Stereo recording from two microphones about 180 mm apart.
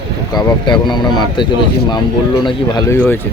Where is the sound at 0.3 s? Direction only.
25° left (ahead or behind).